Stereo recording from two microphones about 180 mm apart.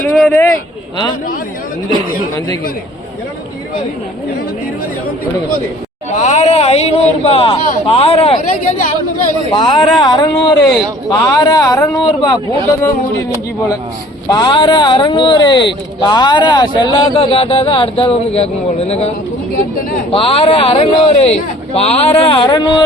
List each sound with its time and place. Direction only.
0.0 s speech: 5° left (ahead or behind)
6.1 s speech: 40° left (ahead or behind)
9.5 s speech: 25° left (ahead or behind)
9.7 s speech: centre (ahead or behind)
10.0 s speech: 20° left (ahead or behind)
14.3 s speech: 25° left (ahead or behind)